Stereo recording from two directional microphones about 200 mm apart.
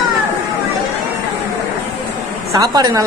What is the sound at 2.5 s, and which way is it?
Speech, 20° right (ahead or behind).